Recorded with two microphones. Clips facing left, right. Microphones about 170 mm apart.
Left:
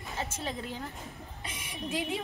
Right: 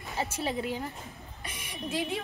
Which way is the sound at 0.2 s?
10° right (ahead or behind).